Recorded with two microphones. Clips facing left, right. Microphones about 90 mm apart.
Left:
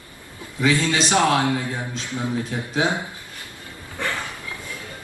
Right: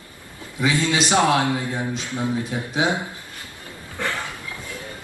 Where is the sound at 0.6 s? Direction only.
15° right (ahead or behind).